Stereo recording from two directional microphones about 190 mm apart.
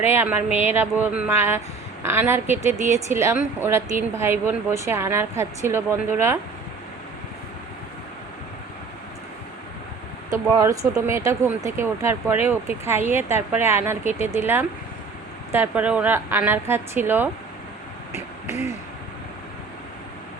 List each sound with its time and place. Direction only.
0.0 s speech: 10° right (ahead or behind)
2.7 s speech: 40° right (ahead or behind)
3.1 s speech: 15° right (ahead or behind)
10.2 s speech: 15° right (ahead or behind)
18.1 s a sound: 35° left (ahead or behind)